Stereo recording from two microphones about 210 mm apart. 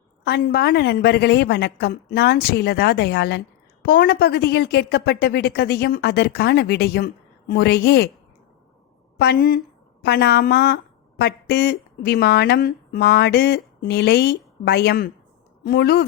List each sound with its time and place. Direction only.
0.3 s a woman's voice: 50° left (ahead or behind)
9.1 s a woman's voice: 50° left (ahead or behind)